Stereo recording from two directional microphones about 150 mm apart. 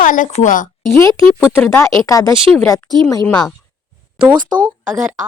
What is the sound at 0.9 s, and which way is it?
Speech, 20° left (ahead or behind).